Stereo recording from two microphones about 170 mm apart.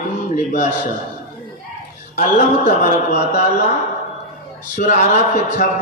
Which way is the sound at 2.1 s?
55° left (ahead or behind).